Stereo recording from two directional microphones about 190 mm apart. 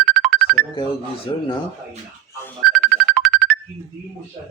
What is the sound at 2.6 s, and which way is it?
Music, centre (ahead or behind).